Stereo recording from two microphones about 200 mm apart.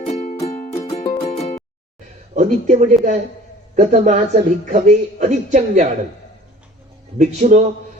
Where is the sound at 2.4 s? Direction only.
40° right (ahead or behind).